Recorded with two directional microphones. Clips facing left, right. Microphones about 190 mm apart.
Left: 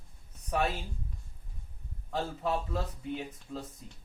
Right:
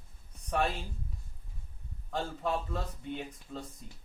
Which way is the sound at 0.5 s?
5° left (ahead or behind).